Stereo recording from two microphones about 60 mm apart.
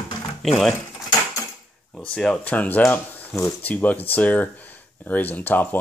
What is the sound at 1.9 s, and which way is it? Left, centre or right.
Speech, centre.